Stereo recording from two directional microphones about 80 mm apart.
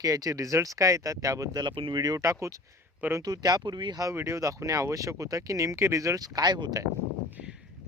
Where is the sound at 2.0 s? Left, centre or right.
Right.